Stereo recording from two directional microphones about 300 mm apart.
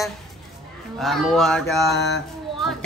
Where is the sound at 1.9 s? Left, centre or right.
Left.